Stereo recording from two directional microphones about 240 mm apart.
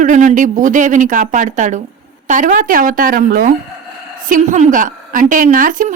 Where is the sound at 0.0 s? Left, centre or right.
Right.